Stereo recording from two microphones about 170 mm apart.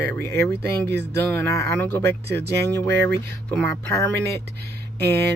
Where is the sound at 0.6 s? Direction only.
75° right (ahead or behind).